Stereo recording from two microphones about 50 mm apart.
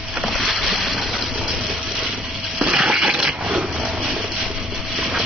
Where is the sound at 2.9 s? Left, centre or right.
Centre.